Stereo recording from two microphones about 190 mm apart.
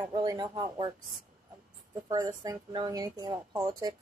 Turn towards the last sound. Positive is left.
turn(degrees=-20)  # may be behind; listen again after turning